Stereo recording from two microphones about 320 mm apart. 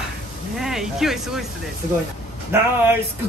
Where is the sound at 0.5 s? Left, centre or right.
Centre.